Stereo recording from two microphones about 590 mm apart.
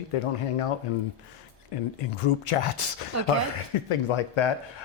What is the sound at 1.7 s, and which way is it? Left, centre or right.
Speech, left.